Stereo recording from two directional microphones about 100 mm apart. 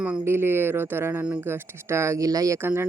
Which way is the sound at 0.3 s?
25° right (ahead or behind).